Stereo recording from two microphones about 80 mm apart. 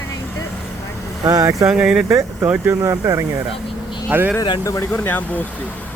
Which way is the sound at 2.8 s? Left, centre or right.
Right.